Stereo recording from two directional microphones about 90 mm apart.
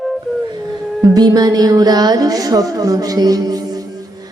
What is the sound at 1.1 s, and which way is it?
A woman's voice, 45° right (ahead or behind).